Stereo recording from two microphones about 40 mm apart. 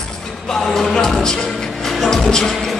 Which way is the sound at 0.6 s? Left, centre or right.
Centre.